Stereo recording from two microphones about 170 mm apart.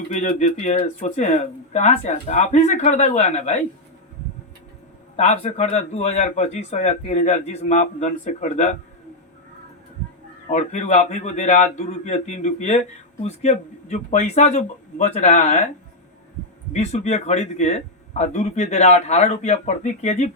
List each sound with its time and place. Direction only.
0.1 s speech: 45° left (ahead or behind)
5.1 s a man's voice: 40° left (ahead or behind)
10.5 s a man's voice: 45° left (ahead or behind)
16.7 s a man's voice: 40° left (ahead or behind)